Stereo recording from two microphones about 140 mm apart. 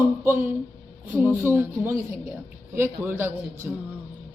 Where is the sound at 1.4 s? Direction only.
20° right (ahead or behind).